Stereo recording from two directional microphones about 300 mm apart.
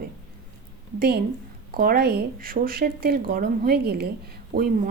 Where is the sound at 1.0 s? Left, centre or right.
Right.